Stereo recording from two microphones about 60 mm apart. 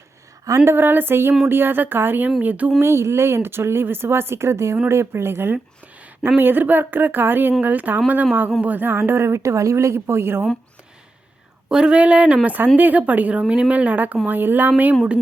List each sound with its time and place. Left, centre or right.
0.6 s speech: right
2.7 s speech: right
11.7 s speech: centre
12.5 s speech: right